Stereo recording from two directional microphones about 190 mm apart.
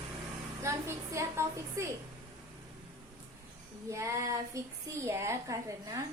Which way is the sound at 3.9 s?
15° right (ahead or behind).